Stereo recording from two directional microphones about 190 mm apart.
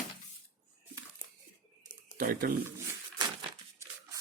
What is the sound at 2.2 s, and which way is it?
Speech, 50° right (ahead or behind).